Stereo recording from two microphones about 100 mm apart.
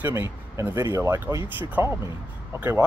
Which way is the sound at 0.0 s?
30° right (ahead or behind).